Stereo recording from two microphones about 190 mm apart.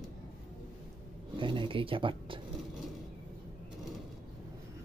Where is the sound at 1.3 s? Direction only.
25° right (ahead or behind).